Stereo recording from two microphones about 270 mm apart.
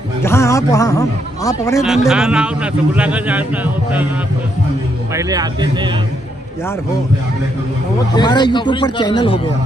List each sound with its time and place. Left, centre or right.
0.2 s a man's voice: centre
1.8 s a man's voice: centre
5.1 s speech: centre
8.1 s a man's voice: centre